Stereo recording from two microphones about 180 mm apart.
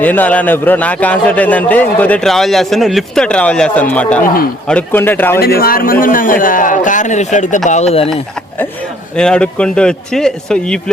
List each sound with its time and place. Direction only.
0.0 s a man's voice: 10° left (ahead or behind)
5.4 s a man's voice: 55° left (ahead or behind); by 8.1 s 35° left (ahead or behind)
9.1 s a man's voice: 5° left (ahead or behind)